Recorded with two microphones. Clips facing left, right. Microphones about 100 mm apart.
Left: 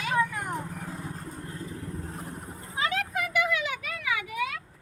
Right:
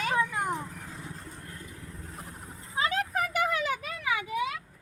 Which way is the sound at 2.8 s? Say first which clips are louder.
Right 1 dB; 35° right (ahead or behind).